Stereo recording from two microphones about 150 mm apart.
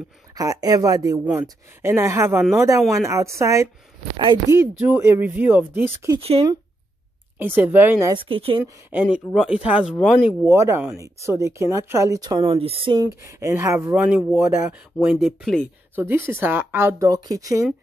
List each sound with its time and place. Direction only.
0.3 s a woman's voice: 25° right (ahead or behind)
1.2 s a woman's voice: 10° right (ahead or behind)
6.1 s speech: 40° right (ahead or behind)
7.3 s speech: 10° right (ahead or behind)
8.1 s speech: 35° right (ahead or behind)
8.9 s speech: 15° right (ahead or behind)
9.3 s speech: centre (ahead or behind)
10.2 s a woman's voice: 20° right (ahead or behind); by 15.6 s centre (ahead or behind)
16.0 s speech: 15° right (ahead or behind)